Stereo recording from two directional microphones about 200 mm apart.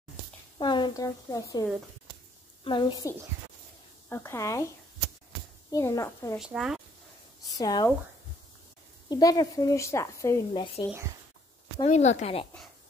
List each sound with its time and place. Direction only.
0.6 s a woman's voice: 25° left (ahead or behind)
5.7 s speech: 15° left (ahead or behind)
6.4 s speech: centre (ahead or behind)
7.5 s speech: 20° left (ahead or behind)
9.1 s speech: 20° left (ahead or behind)
10.9 s speech: 15° right (ahead or behind)
11.8 s speech: 35° left (ahead or behind)